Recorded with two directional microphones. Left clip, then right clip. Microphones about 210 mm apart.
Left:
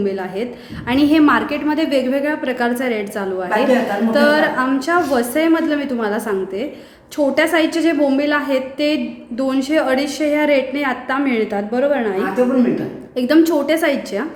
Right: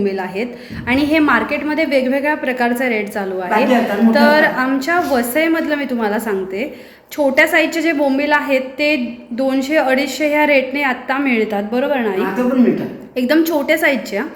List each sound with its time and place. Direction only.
0.0 s a woman's voice: 15° left (ahead or behind)